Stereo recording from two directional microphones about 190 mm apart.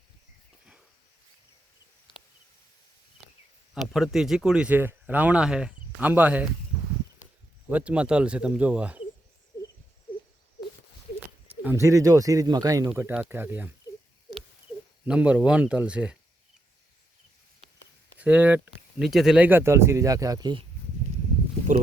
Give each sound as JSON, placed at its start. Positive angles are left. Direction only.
{"t": 3.9, "sound": "speech", "side_deg": 0}
{"t": 7.7, "sound": "speech", "side_deg": -5}
{"t": 11.4, "sound": "speech", "side_deg": -10}
{"t": 12.9, "sound": "speech", "side_deg": -5}
{"t": 15.0, "sound": "speech", "side_deg": -5}
{"t": 18.2, "sound": "speech", "side_deg": -10}